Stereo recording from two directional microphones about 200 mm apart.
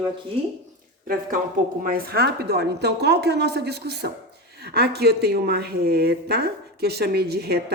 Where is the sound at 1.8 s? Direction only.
50° right (ahead or behind).